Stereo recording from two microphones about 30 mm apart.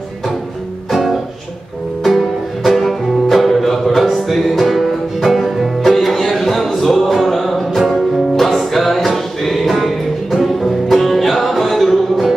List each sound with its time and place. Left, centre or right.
2.6 s music: centre